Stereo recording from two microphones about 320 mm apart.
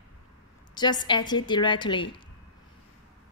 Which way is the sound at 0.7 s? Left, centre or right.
Centre.